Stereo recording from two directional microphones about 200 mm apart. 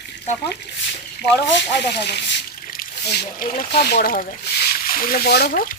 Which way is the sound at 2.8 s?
45° left (ahead or behind).